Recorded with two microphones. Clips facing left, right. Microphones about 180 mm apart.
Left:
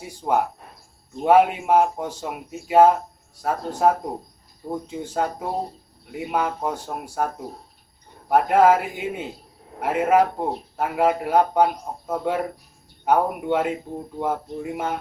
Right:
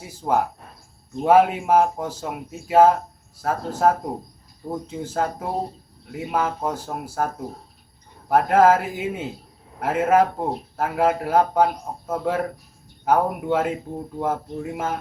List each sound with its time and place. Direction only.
0.0 s speech: centre (ahead or behind)